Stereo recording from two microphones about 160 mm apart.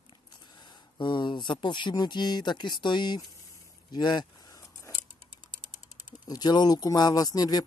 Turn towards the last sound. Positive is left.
turn(degrees=25)  # may be behind; listen again after turning